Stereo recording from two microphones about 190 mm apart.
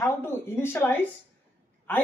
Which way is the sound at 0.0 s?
10° left (ahead or behind).